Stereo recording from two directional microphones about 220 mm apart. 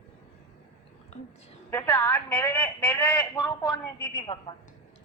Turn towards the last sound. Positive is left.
turn(degrees=20)  # may be behind; listen again after turning